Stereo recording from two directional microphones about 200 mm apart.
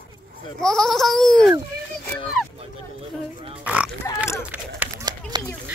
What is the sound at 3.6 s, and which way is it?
Speech, 5° right (ahead or behind).